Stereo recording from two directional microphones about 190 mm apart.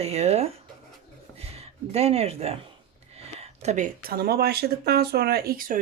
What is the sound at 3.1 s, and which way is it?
Speech, 35° right (ahead or behind).